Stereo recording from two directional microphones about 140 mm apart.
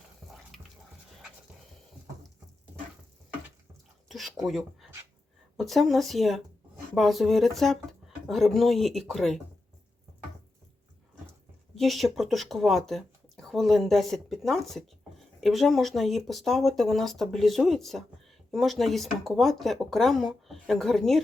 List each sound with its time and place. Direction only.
0.5 s a sound: centre (ahead or behind)
4.4 s speech: centre (ahead or behind)
11.7 s speech: centre (ahead or behind)